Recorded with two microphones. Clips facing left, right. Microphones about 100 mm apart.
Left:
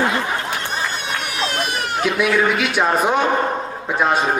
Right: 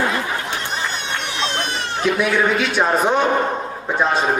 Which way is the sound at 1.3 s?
25° right (ahead or behind).